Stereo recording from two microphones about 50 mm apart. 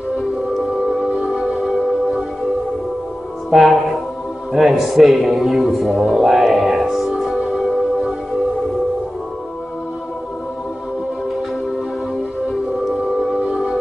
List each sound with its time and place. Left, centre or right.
0.2 s music: centre
3.4 s speech: centre
4.5 s music: centre
12.4 s music: centre